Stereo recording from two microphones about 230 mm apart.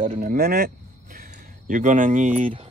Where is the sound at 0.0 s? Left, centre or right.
Right.